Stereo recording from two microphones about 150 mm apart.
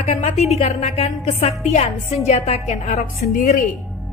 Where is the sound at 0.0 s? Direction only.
50° left (ahead or behind).